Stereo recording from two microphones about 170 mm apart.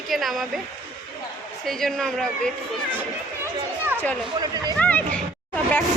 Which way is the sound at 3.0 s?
10° right (ahead or behind).